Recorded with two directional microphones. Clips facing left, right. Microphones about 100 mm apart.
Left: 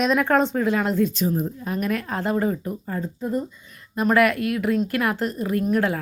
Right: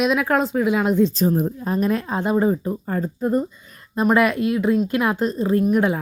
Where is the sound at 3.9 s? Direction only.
20° right (ahead or behind).